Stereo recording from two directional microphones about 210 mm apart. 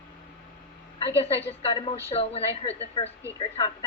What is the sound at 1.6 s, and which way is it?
A woman's voice, 25° left (ahead or behind).